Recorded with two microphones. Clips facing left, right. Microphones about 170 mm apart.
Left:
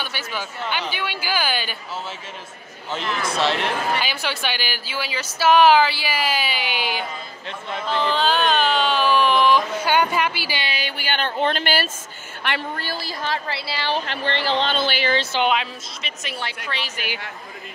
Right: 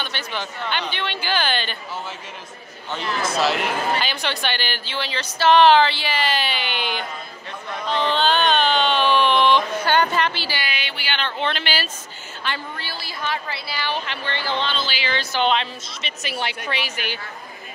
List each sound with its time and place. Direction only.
0.0 s a woman's voice: 5° left (ahead or behind)
3.3 s a woman's voice: 5° right (ahead or behind)
10.6 s a sound: 35° left (ahead or behind)
12.7 s speech: 45° left (ahead or behind)
14.8 s speech: 55° left (ahead or behind)
15.4 s a woman's voice: 5° left (ahead or behind); by 17.0 s 10° right (ahead or behind)